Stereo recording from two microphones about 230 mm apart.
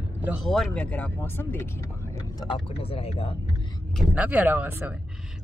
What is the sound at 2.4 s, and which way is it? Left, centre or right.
Speech, left.